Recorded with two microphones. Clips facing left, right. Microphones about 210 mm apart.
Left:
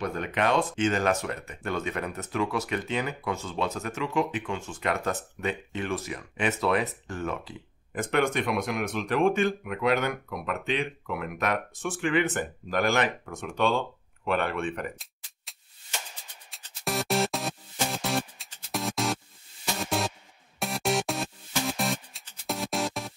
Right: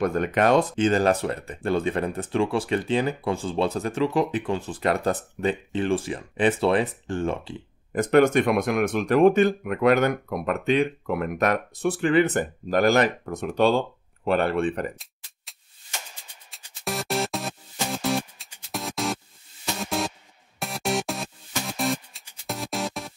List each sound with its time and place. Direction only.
0.0 s speech: 45° right (ahead or behind)
16.8 s music: centre (ahead or behind)